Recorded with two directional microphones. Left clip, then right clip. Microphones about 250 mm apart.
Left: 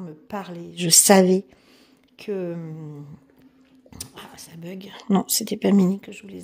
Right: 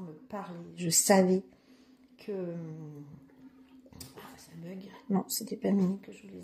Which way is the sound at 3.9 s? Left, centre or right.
Left.